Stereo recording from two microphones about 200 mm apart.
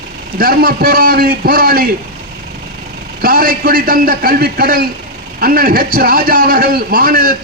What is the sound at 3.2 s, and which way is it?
A man's voice, 45° right (ahead or behind).